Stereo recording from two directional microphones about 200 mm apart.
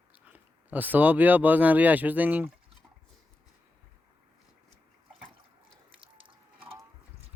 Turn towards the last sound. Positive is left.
turn(degrees=-25)  # may be behind; listen again after turning